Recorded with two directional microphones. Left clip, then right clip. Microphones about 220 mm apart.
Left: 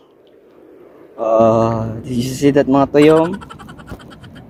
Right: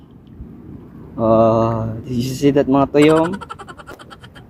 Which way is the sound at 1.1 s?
10° left (ahead or behind).